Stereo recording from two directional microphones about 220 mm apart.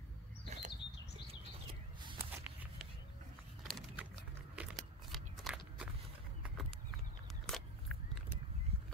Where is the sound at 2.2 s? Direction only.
10° right (ahead or behind).